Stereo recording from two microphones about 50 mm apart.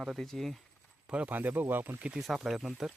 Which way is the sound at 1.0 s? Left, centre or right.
Right.